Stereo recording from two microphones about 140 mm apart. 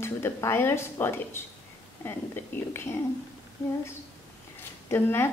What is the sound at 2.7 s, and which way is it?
Speech, 15° left (ahead or behind).